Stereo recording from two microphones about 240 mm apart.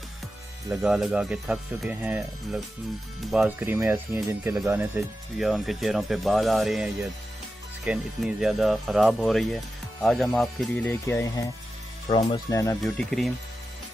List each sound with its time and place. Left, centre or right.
0.7 s speech: centre
12.1 s speech: left
12.8 s speech: centre